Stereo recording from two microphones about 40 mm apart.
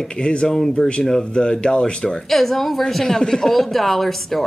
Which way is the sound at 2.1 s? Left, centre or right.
Centre.